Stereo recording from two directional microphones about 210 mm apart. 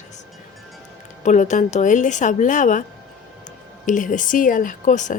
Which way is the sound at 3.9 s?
40° left (ahead or behind).